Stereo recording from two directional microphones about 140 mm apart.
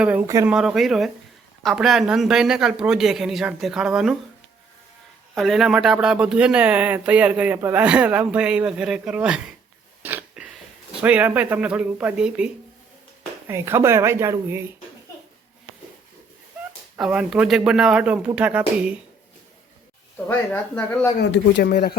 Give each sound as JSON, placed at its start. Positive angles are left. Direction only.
{"t": 0.0, "sound": "speech", "side_deg": -10}
{"t": 5.3, "sound": "speech", "side_deg": 0}
{"t": 10.0, "sound": "a sound", "side_deg": -15}
{"t": 11.0, "sound": "speech", "side_deg": -10}
{"t": 13.5, "sound": "speech", "side_deg": -20}
{"t": 17.0, "sound": "speech", "side_deg": -5}
{"t": 20.2, "sound": "speech", "side_deg": 15}
{"t": 21.6, "sound": "speech", "side_deg": 90}